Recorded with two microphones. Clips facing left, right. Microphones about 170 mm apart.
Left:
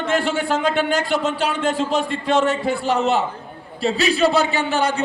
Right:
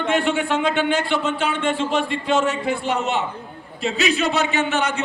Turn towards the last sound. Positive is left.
turn(degrees=35)  # may be behind; listen again after turning